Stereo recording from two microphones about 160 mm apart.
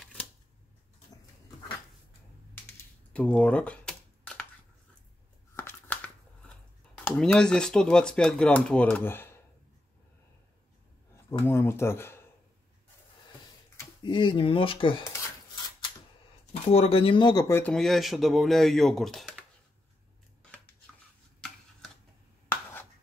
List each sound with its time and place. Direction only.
0.0 s a sound: 10° left (ahead or behind)
2.5 s typing: 10° left (ahead or behind)
5.6 s a sound: 10° left (ahead or behind)
7.1 s speech: 5° left (ahead or behind)
11.4 s speech: 15° left (ahead or behind)
13.7 s speech: 30° left (ahead or behind)
16.7 s speech: 35° left (ahead or behind)
17.5 s speech: 15° left (ahead or behind)
17.7 s speech: centre (ahead or behind)
22.5 s a sound: 10° left (ahead or behind)